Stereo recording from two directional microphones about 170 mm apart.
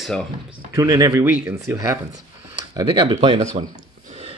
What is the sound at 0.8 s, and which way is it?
Speech, 20° right (ahead or behind).